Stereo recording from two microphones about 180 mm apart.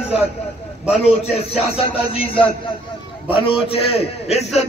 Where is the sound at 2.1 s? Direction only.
30° left (ahead or behind).